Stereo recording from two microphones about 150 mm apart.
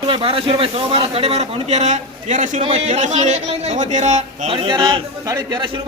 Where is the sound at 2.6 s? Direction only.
45° right (ahead or behind).